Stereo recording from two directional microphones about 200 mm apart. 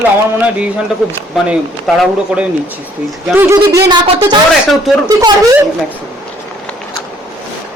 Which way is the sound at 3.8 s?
25° right (ahead or behind).